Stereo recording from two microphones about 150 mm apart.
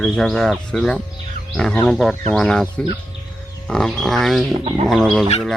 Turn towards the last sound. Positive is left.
turn(degrees=0)  # may be behind; listen again after turning